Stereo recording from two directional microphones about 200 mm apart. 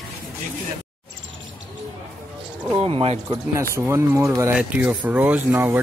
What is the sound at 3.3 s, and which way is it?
Speech, 15° right (ahead or behind).